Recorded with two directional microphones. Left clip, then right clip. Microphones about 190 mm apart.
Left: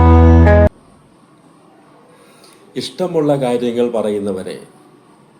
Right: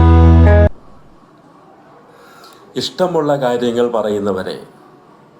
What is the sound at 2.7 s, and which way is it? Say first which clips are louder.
Speech: right 2 dB; 15° left (ahead or behind).